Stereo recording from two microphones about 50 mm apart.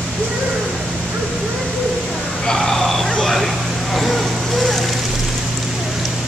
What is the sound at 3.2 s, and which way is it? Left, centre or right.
Vehicle, centre.